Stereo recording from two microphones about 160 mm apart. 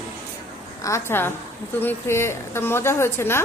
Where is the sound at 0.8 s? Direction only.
15° left (ahead or behind).